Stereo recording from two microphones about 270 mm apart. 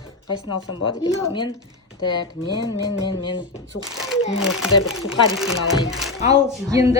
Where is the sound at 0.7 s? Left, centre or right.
Centre.